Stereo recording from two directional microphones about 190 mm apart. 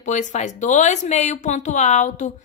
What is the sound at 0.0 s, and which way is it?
Speech, 40° left (ahead or behind).